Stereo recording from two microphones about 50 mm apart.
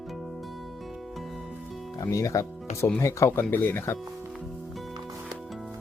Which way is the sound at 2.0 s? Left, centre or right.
Left.